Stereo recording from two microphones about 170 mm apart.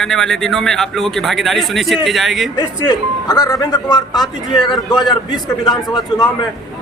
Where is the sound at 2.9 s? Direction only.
25° left (ahead or behind).